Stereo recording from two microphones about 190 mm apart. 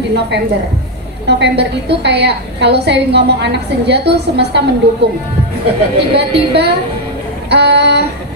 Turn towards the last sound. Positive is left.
turn(degrees=-60)  # may be behind; listen again after turning